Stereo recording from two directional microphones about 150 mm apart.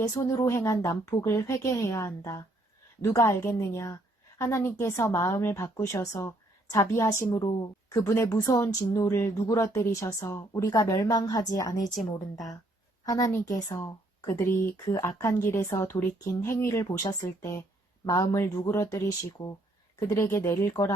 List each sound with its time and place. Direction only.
0.1 s a woman's voice: 20° left (ahead or behind)
13.1 s a woman's voice: 25° left (ahead or behind)